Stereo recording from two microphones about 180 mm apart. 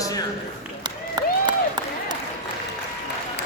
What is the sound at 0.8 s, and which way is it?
Applause, 25° right (ahead or behind).